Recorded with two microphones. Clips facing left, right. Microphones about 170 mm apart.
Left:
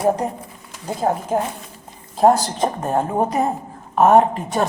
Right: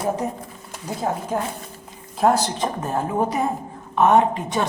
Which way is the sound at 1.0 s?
45° left (ahead or behind).